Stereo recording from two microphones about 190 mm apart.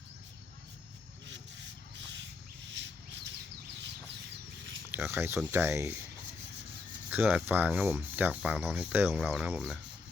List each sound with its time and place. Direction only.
1.3 s rub: 70° right (ahead or behind)
2.6 s a sound: 70° right (ahead or behind)
4.9 s speech: 10° right (ahead or behind)
7.1 s speech: 10° right (ahead or behind)